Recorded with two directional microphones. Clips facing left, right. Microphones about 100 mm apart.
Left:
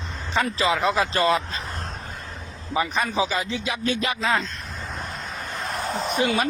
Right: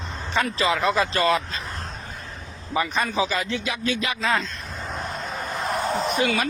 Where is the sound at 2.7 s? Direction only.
10° left (ahead or behind); by 4.2 s 35° left (ahead or behind).